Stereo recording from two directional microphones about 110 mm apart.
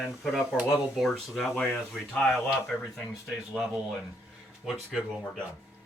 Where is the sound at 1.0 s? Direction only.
Centre (ahead or behind).